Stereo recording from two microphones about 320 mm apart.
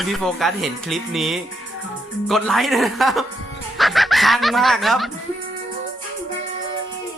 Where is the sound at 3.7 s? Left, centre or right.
Centre.